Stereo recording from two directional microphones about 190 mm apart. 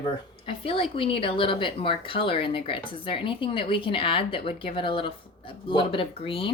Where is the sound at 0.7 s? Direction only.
30° left (ahead or behind).